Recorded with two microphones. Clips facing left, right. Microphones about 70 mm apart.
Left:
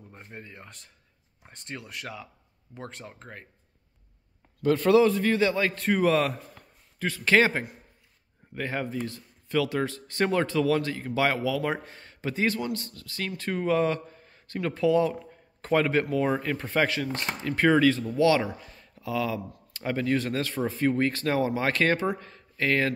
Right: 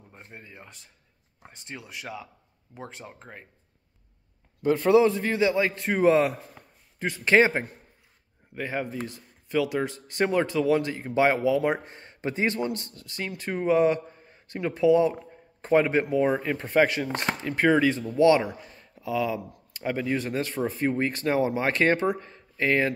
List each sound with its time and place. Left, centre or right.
0.3 s speech: centre
4.6 s speech: centre
8.5 s speech: centre
18.4 s speech: centre